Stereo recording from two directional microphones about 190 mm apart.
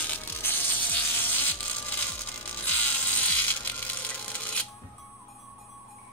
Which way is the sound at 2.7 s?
10° left (ahead or behind).